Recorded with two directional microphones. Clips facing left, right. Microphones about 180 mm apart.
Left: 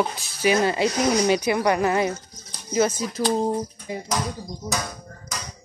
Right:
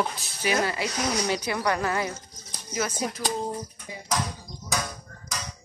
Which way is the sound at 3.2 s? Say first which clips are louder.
Left 11 dB; 35° left (ahead or behind).